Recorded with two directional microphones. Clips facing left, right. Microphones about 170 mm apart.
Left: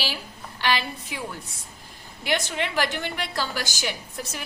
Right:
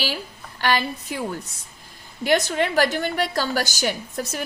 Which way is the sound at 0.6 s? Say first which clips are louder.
Right 3 dB; 45° right (ahead or behind).